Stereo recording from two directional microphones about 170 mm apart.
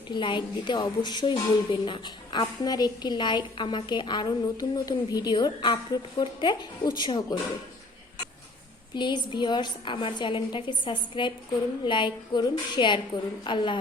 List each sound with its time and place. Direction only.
0.1 s a woman's voice: 30° left (ahead or behind)
9.0 s a woman's voice: 25° left (ahead or behind)